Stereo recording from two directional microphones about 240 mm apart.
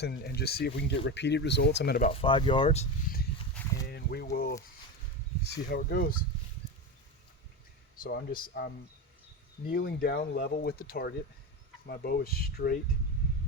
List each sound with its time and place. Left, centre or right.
0.0 s speech: left
2.1 s speech: left
3.8 s speech: left
7.9 s speech: left
9.7 s speech: left